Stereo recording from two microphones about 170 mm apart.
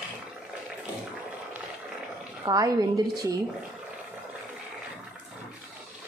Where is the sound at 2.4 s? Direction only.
20° right (ahead or behind).